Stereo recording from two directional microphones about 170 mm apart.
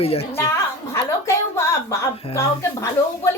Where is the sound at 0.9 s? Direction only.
15° left (ahead or behind).